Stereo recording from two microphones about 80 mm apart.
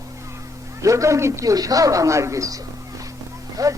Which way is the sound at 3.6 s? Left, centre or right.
Right.